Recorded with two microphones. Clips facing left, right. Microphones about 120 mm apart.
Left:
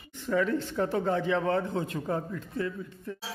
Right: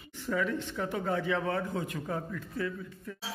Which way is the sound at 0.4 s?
35° left (ahead or behind).